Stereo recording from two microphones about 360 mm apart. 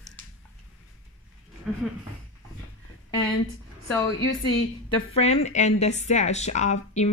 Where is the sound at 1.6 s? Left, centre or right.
Centre.